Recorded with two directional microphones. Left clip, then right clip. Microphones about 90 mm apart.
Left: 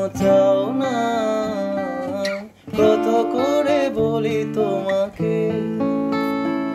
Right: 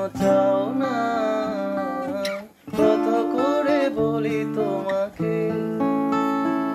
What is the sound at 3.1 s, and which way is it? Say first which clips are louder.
Music: left 3 dB; 30° left (ahead or behind).